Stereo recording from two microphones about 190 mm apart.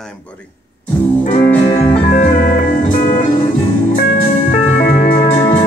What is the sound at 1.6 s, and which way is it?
Music, 30° left (ahead or behind).